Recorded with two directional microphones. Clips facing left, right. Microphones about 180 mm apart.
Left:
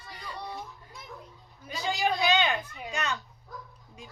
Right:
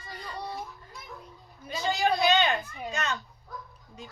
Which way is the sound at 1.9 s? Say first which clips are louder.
Right 2 dB; 15° left (ahead or behind).